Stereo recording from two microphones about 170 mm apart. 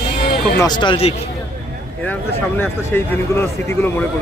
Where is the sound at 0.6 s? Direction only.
25° left (ahead or behind).